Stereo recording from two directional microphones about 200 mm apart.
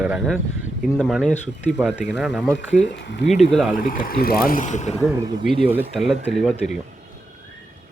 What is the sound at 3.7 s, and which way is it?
Speech, 45° left (ahead or behind).